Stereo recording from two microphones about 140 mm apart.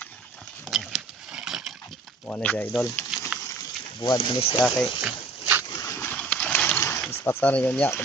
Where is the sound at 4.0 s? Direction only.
35° left (ahead or behind).